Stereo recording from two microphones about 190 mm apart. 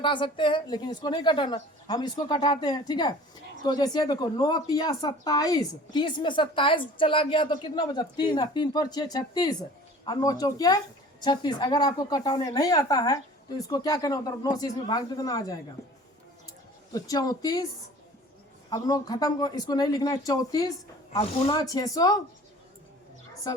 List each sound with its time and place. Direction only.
0.0 s speech: 25° left (ahead or behind)
16.9 s speech: 20° left (ahead or behind)
18.7 s speech: 20° left (ahead or behind)
21.2 s speech: 30° left (ahead or behind)
21.6 s speech: 20° left (ahead or behind)